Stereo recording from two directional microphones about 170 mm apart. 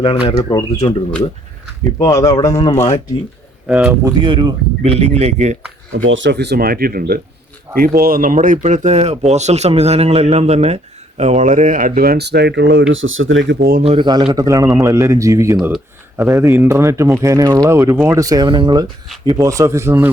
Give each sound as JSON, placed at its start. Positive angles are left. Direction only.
{"t": 0.3, "sound": "speech", "side_deg": 30}
{"t": 2.0, "sound": "speech", "side_deg": 20}
{"t": 3.7, "sound": "speech", "side_deg": -5}
{"t": 4.0, "sound": "speech", "side_deg": -25}
{"t": 6.1, "sound": "speech", "side_deg": -85}
{"t": 13.5, "sound": "speech", "side_deg": -60}
{"t": 13.8, "sound": "a man's voice", "side_deg": -30}
{"t": 15.5, "sound": "speech", "side_deg": -5}
{"t": 16.1, "sound": "a man's voice", "side_deg": -15}